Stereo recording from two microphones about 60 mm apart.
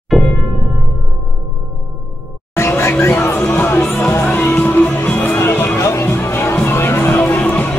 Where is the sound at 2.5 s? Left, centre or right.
Left.